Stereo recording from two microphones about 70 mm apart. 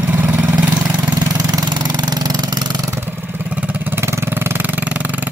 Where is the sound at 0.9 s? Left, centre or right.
Right.